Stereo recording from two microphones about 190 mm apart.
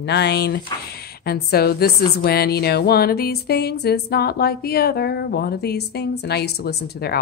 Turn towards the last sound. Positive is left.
turn(degrees=55)  # may be behind; listen again after turning